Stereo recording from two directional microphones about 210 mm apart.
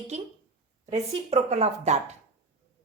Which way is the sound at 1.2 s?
30° right (ahead or behind).